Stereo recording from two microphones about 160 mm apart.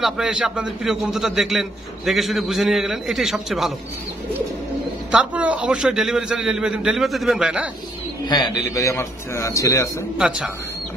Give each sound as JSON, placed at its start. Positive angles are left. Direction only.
{"t": 0.0, "sound": "a man's voice", "side_deg": -5}
{"t": 5.1, "sound": "a man's voice", "side_deg": -10}
{"t": 8.3, "sound": "a man's voice", "side_deg": 25}
{"t": 10.1, "sound": "a man's voice", "side_deg": -5}